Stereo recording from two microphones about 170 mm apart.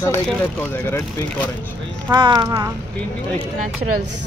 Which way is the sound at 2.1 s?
25° right (ahead or behind).